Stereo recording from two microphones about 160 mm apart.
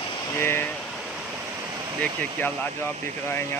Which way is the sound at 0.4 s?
15° left (ahead or behind).